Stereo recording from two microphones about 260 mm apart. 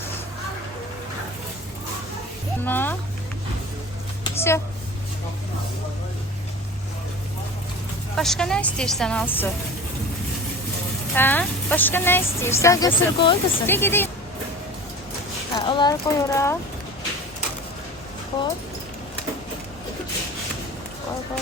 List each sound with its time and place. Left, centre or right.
2.6 s speech: centre
4.2 s a sound: centre
8.1 s a woman's voice: centre
11.1 s a woman's voice: centre
15.5 s speech: centre